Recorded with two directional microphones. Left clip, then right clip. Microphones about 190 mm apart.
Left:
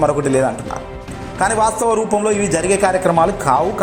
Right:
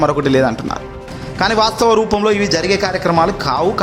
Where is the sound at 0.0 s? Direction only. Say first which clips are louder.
Right 1 dB; 30° right (ahead or behind).